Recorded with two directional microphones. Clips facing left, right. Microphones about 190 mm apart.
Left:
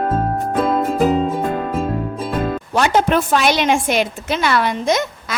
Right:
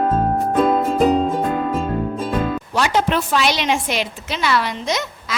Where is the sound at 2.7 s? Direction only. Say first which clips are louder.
Left 4 dB; 50° left (ahead or behind).